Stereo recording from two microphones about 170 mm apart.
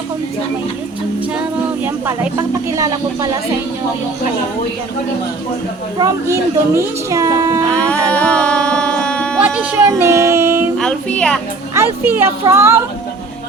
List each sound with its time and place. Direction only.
1.8 s speech: 10° right (ahead or behind)
6.0 s a woman's voice: 15° right (ahead or behind)
7.7 s speech: 5° left (ahead or behind)
8.1 s music: 5° left (ahead or behind)
9.4 s speech: 10° right (ahead or behind)
10.8 s speech: 5° left (ahead or behind)
11.7 s a woman's voice: 15° right (ahead or behind)